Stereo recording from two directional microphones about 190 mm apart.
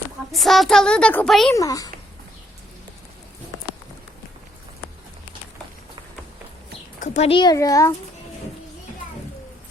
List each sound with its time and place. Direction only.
0.3 s a woman's voice: centre (ahead or behind)
1.5 s a child's voice: 20° left (ahead or behind)
7.0 s speech: 35° left (ahead or behind); by 7.9 s 15° left (ahead or behind)